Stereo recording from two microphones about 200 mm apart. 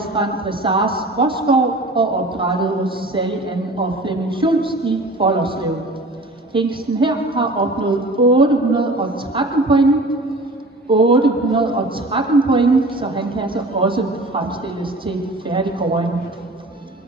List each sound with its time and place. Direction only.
0.1 s a man's voice: 25° right (ahead or behind)
10.9 s a man's voice: 25° right (ahead or behind)